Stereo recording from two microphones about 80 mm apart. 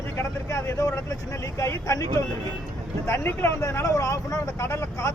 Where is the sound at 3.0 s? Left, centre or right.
Left.